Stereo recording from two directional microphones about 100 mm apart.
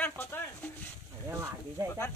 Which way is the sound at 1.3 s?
30° right (ahead or behind).